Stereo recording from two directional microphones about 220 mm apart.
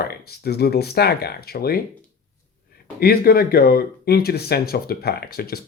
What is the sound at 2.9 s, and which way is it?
Speech, 45° left (ahead or behind).